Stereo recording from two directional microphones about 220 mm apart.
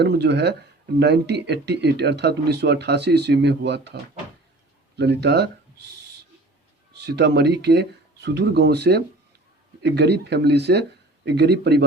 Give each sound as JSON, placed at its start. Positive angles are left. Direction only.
{"t": 0.0, "sound": "speech", "side_deg": -50}
{"t": 4.9, "sound": "speech", "side_deg": -50}
{"t": 7.0, "sound": "speech", "side_deg": -50}